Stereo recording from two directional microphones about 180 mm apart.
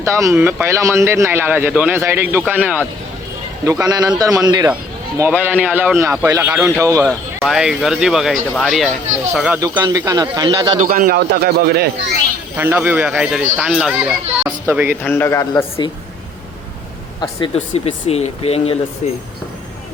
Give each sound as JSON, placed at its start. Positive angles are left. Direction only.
{"t": 0.0, "sound": "speech", "side_deg": -15}
{"t": 3.7, "sound": "a man's voice", "side_deg": -20}
{"t": 7.4, "sound": "speech", "side_deg": 0}
{"t": 9.6, "sound": "a man's voice", "side_deg": -20}
{"t": 10.8, "sound": "a man's voice", "side_deg": -50}
{"t": 12.5, "sound": "speech", "side_deg": -10}
{"t": 15.0, "sound": "speech", "side_deg": 10}
{"t": 17.2, "sound": "speech", "side_deg": 30}